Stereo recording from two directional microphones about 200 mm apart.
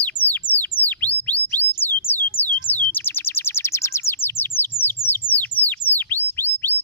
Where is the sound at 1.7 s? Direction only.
10° left (ahead or behind).